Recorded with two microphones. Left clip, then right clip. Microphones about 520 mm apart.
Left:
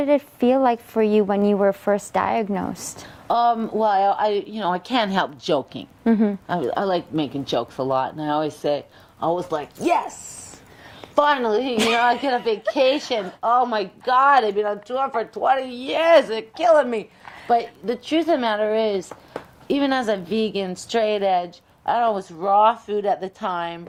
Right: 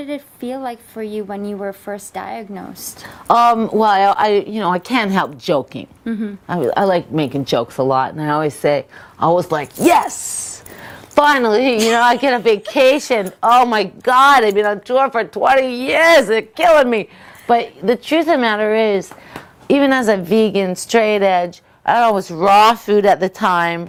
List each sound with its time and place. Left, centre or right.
0.0 s a woman's voice: left
3.2 s a woman's voice: right; by 5.9 s centre
6.1 s speech: left
6.5 s a woman's voice: right
11.1 s a woman's voice: right
13.4 s a woman's voice: right